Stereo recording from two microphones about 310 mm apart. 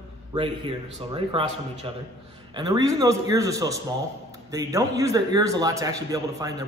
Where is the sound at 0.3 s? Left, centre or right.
Centre.